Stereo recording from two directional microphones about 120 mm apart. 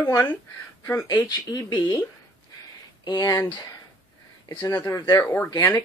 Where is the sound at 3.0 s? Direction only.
35° left (ahead or behind).